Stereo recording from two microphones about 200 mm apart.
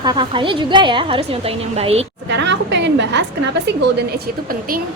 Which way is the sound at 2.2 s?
60° right (ahead or behind).